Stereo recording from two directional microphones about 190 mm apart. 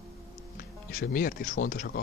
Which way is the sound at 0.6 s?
50° left (ahead or behind).